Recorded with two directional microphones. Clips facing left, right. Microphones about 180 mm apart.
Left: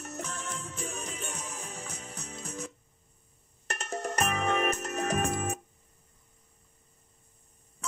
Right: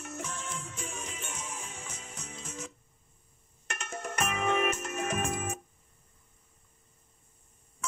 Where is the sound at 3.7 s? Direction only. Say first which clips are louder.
Left 4 dB; 35° left (ahead or behind).